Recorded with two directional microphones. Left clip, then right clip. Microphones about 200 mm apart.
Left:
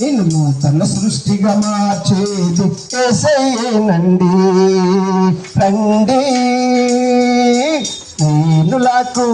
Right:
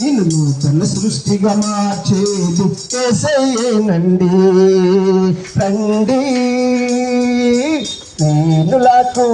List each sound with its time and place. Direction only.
3.0 s music: 20° left (ahead or behind); by 9.3 s 45° left (ahead or behind)